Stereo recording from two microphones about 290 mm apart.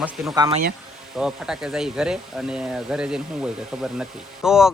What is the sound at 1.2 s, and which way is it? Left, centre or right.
Speech, centre.